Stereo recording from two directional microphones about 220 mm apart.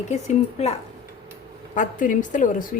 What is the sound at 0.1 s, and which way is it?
Speech, 30° left (ahead or behind).